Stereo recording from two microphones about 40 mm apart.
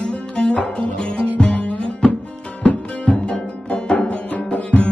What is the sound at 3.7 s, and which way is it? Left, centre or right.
Music, left.